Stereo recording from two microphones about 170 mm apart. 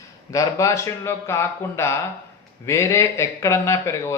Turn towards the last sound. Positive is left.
turn(degrees=15)  # may be behind; listen again after turning